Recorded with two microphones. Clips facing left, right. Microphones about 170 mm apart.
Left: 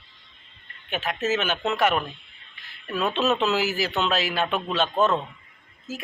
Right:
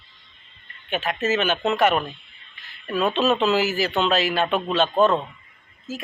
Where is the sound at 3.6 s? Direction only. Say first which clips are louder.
Right 3 dB; 45° right (ahead or behind).